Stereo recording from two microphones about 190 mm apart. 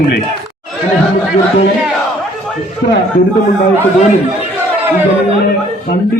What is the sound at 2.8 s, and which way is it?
Speech, 65° left (ahead or behind).